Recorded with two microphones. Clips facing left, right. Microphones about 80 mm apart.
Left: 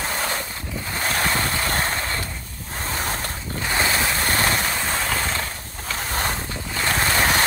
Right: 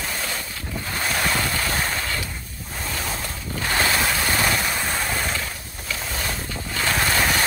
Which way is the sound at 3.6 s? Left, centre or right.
Centre.